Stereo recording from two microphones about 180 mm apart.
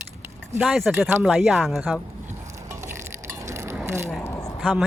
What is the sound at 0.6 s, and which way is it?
Speech, centre (ahead or behind).